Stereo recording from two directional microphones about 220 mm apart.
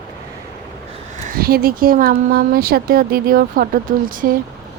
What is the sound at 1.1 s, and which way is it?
Speech, 35° right (ahead or behind).